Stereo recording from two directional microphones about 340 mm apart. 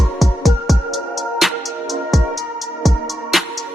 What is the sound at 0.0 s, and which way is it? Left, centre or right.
Music, centre.